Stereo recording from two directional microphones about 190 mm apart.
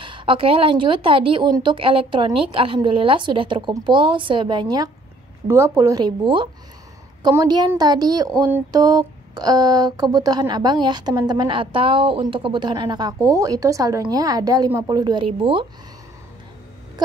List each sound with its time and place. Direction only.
0.0 s speech: 25° right (ahead or behind)